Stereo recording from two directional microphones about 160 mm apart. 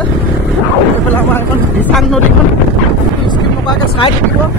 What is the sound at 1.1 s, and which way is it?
Speech, 10° left (ahead or behind).